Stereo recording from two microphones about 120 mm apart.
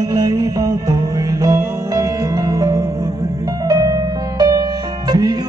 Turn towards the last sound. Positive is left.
turn(degrees=-35)  # may be behind; listen again after turning